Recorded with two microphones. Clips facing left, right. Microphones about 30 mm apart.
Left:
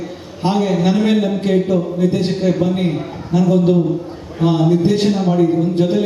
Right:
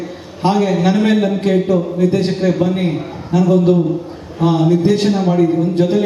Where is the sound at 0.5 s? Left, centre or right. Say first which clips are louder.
Right 1 dB; centre.